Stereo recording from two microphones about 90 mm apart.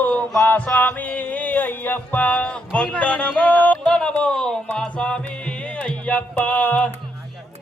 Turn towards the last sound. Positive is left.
turn(degrees=15)  # may be behind; listen again after turning